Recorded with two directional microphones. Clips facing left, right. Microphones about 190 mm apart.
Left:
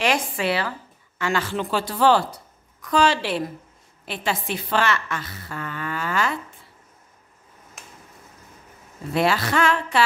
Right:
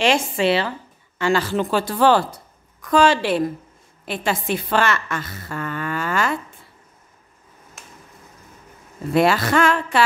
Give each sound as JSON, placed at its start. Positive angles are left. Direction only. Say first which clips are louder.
{"t": 0.0, "sound": "a woman's voice", "louder": "right 4 dB", "side_deg": -25}
{"t": 7.8, "sound": "a sound", "louder": "even", "side_deg": 0}
{"t": 9.1, "sound": "a woman's voice", "louder": "right 4 dB", "side_deg": -50}